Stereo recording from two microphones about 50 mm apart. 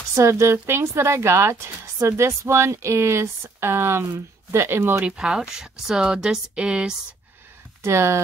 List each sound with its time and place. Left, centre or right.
0.1 s speech: right
5.0 s speech: centre
7.8 s speech: right